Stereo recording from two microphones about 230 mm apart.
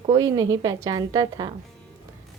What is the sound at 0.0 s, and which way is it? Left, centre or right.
A woman's voice, centre.